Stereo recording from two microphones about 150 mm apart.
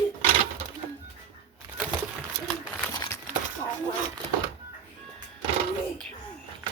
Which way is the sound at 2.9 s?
20° left (ahead or behind).